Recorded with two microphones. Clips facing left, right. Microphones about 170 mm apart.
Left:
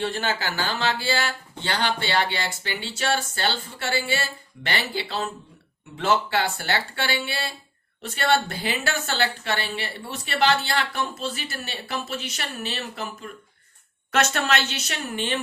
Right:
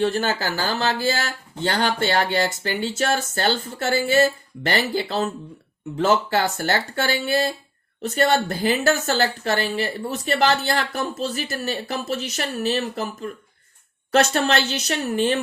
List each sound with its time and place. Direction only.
0.0 s speech: 40° right (ahead or behind)